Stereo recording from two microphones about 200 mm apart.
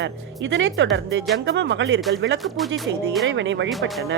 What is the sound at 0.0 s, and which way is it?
Speech, 65° right (ahead or behind).